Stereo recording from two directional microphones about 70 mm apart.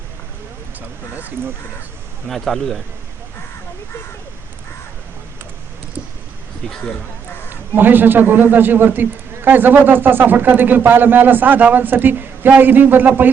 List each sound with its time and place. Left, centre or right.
0.8 s a man's voice: right
2.2 s a man's voice: centre
6.7 s a man's voice: centre
7.8 s a man's voice: right